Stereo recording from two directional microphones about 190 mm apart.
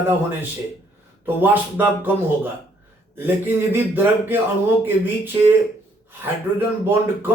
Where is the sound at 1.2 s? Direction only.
10° right (ahead or behind).